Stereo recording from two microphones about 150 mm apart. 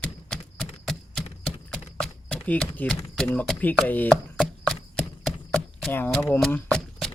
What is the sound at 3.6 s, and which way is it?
Chopping, 10° left (ahead or behind).